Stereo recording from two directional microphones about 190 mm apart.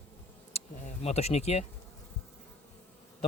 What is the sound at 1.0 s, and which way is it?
Speech, 35° left (ahead or behind).